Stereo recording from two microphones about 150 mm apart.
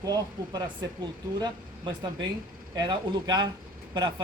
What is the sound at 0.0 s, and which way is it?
Speech, 25° right (ahead or behind).